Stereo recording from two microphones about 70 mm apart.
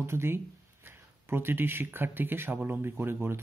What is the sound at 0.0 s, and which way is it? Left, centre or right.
Speech, right.